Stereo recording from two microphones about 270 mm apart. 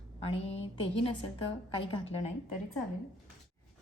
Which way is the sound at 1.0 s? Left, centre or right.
Left.